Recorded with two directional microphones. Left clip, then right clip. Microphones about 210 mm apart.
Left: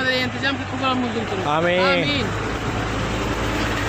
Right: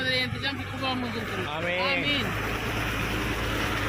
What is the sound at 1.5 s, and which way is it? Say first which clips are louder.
Speech: left 11 dB; 45° left (ahead or behind).